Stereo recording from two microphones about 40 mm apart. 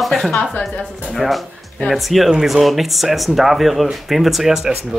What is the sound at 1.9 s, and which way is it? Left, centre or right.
Speech, centre.